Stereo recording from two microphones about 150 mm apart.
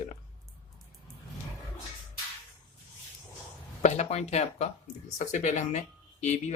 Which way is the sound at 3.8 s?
45° left (ahead or behind).